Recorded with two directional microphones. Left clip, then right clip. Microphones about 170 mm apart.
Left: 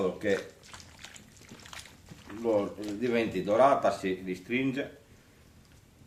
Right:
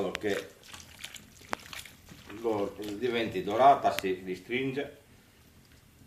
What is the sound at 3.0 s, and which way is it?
Speech, 65° left (ahead or behind).